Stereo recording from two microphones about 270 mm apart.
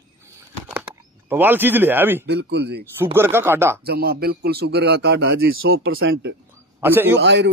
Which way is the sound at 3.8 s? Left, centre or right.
Right.